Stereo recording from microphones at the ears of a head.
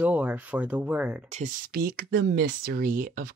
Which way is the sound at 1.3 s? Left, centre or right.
Right.